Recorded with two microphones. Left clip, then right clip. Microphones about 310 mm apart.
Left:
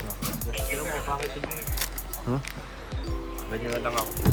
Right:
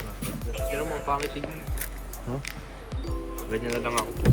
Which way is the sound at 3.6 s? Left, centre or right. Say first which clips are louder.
Left 1 dB; centre.